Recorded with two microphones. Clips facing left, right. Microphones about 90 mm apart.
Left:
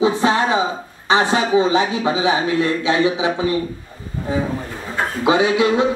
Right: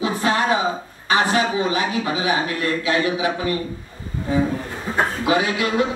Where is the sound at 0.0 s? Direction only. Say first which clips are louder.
Left 4 dB; 20° left (ahead or behind).